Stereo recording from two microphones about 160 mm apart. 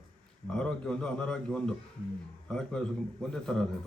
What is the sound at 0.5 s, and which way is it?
A man's voice, 5° left (ahead or behind).